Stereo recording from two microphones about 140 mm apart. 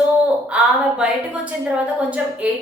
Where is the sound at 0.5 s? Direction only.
10° right (ahead or behind).